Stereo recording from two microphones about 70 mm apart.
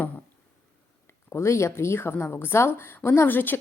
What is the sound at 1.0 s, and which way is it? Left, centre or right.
A woman's voice, left.